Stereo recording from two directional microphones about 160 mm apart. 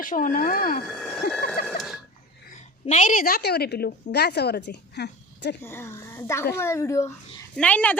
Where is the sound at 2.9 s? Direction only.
55° left (ahead or behind); by 5.5 s 90° left.